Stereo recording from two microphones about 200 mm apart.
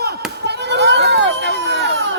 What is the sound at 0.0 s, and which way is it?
Chop, 55° right (ahead or behind).